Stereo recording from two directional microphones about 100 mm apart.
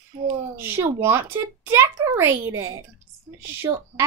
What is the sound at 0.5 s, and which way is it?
Speech, 20° right (ahead or behind).